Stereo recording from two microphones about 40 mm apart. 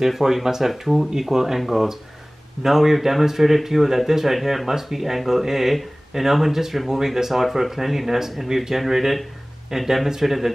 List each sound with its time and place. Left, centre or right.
0.0 s speech: centre